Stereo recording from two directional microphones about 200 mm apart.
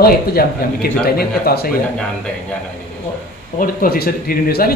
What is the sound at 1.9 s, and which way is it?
Speech, 5° left (ahead or behind).